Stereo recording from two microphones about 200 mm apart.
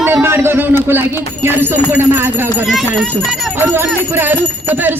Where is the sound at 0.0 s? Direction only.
10° right (ahead or behind).